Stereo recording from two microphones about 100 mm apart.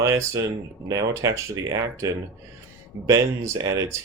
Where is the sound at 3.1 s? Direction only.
30° right (ahead or behind).